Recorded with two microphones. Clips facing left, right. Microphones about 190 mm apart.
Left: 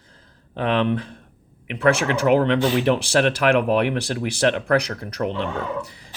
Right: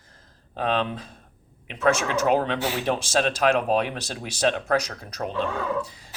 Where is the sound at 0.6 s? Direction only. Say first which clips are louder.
Left 5 dB; 65° left (ahead or behind).